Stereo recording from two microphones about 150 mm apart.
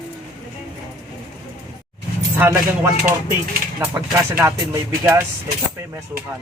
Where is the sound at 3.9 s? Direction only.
20° right (ahead or behind).